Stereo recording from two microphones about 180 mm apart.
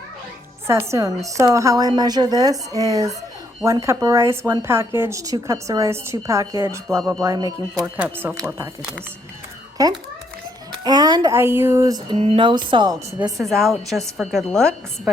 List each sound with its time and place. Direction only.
0.7 s a woman's voice: 15° right (ahead or behind)
7.9 s speech: 5° right (ahead or behind)
9.8 s a woman's voice: 20° right (ahead or behind)
12.1 s a woman's voice: 35° right (ahead or behind)
13.4 s a woman's voice: centre (ahead or behind)